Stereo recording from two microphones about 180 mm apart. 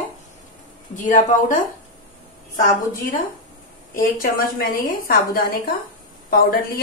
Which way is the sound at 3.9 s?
50° left (ahead or behind).